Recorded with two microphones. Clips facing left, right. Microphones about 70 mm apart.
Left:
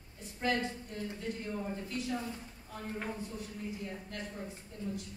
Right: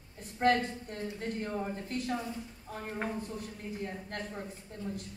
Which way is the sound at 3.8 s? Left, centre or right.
Right.